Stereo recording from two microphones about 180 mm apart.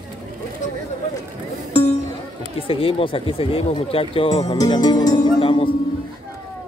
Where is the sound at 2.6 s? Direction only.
30° left (ahead or behind).